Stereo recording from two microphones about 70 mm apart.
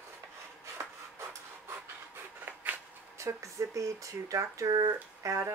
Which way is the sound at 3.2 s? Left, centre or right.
Right.